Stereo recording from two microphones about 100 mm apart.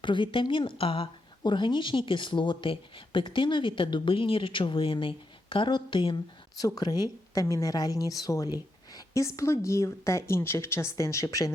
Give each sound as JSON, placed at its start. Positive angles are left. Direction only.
{"t": 0.0, "sound": "speech", "side_deg": 55}
{"t": 0.8, "sound": "speech", "side_deg": 65}
{"t": 6.6, "sound": "speech", "side_deg": 40}